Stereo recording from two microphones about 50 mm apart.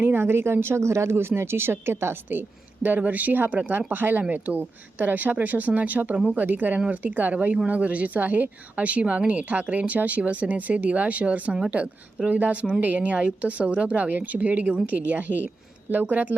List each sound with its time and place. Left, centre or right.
0.0 s speech: right
2.8 s a woman's voice: right